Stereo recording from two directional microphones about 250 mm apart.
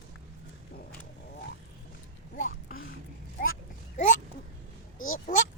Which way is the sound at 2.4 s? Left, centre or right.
Left.